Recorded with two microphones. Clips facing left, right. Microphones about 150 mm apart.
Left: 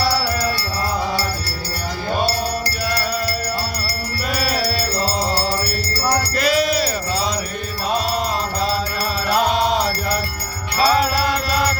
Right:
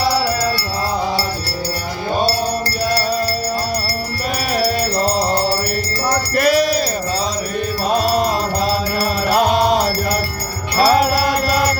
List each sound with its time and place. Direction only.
2.9 s music: 35° right (ahead or behind)
4.4 s music: 50° right (ahead or behind)
6.3 s music: 50° right (ahead or behind)
7.9 s music: 40° right (ahead or behind)
9.3 s music: 45° right (ahead or behind)
10.8 s music: 45° right (ahead or behind)
11.0 s music: 10° right (ahead or behind)